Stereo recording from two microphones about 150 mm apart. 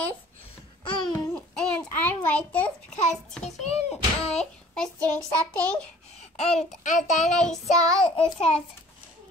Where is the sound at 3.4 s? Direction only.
45° left (ahead or behind).